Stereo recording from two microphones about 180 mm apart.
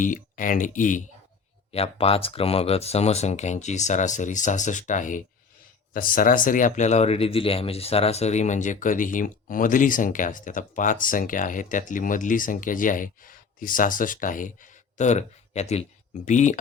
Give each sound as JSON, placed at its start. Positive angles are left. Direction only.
{"t": 0.0, "sound": "speech", "side_deg": 45}
{"t": 1.7, "sound": "speech", "side_deg": 35}